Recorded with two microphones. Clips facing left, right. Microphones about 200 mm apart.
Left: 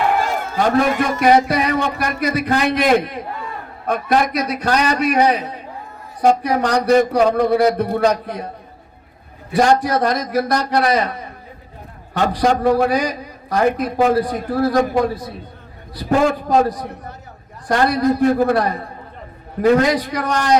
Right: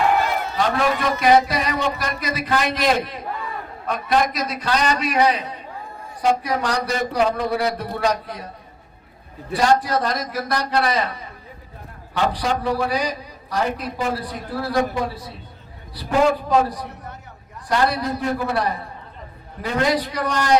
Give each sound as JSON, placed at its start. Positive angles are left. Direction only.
{"t": 0.2, "sound": "a man's voice", "side_deg": 45}
{"t": 6.2, "sound": "a man's voice", "side_deg": 55}
{"t": 7.2, "sound": "a man's voice", "side_deg": 45}
{"t": 9.6, "sound": "a man's voice", "side_deg": 55}
{"t": 12.1, "sound": "a man's voice", "side_deg": 45}